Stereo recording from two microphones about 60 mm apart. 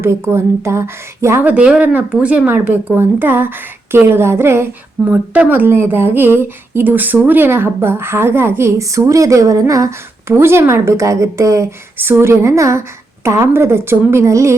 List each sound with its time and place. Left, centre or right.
0.0 s speech: right
1.4 s speech: right
2.6 s speech: right
5.0 s speech: right
5.6 s speech: right
8.8 s speech: right
10.2 s a woman's voice: right
11.9 s speech: right